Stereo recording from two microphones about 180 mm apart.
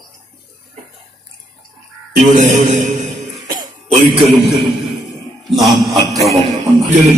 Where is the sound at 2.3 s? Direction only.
45° right (ahead or behind).